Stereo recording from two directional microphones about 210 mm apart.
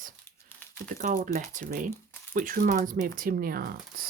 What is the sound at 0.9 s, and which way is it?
Speech, 40° right (ahead or behind).